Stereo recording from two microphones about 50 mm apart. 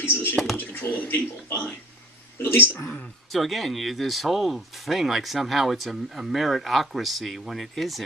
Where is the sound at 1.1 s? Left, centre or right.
Left.